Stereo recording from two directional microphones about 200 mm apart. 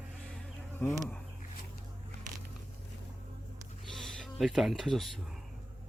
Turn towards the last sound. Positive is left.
turn(degrees=0)  # may be behind; listen again after turning